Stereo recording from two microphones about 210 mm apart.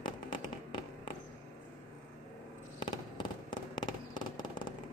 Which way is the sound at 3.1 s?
20° left (ahead or behind).